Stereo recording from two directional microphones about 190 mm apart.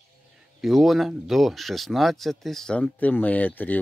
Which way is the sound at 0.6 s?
Centre (ahead or behind).